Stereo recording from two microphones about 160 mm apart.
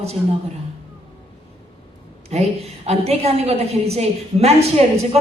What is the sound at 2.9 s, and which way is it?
A woman's voice, 40° right (ahead or behind).